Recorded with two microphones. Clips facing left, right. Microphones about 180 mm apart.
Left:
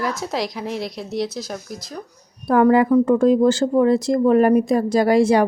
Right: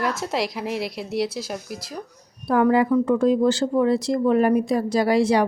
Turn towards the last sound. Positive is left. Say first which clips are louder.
# left 3 dB
turn(degrees=50)  # may be behind; listen again after turning